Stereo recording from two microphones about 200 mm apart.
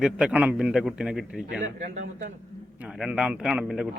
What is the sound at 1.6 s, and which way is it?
Speech, 35° right (ahead or behind).